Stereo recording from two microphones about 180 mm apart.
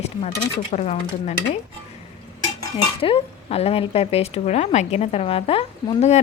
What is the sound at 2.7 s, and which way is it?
Speech, 30° left (ahead or behind).